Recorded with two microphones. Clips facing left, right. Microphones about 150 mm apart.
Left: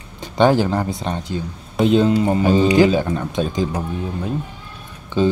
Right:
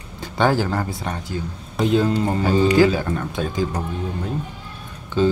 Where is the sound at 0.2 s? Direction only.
20° left (ahead or behind).